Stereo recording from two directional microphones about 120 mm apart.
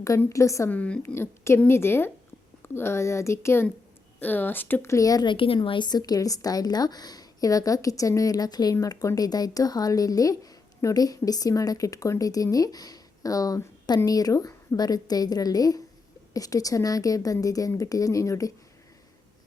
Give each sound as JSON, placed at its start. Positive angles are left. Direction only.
{"t": 0.2, "sound": "a woman's voice", "side_deg": 25}
{"t": 0.7, "sound": "a woman's voice", "side_deg": 10}